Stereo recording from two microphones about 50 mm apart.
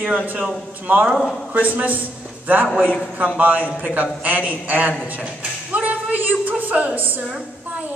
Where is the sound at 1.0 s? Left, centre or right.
Centre.